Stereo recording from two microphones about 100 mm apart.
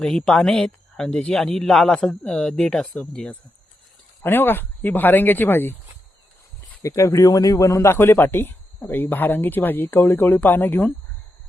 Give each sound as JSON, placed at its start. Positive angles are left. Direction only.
{"t": 0.0, "sound": "speech", "side_deg": 5}
{"t": 4.2, "sound": "speech", "side_deg": 20}
{"t": 6.8, "sound": "speech", "side_deg": 30}